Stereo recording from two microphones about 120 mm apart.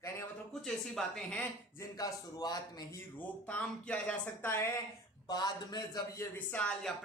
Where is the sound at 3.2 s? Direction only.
15° left (ahead or behind).